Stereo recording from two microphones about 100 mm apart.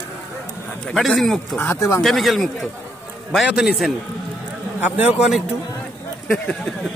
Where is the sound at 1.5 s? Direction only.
25° left (ahead or behind).